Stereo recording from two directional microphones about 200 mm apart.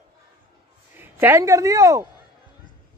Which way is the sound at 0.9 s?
10° right (ahead or behind).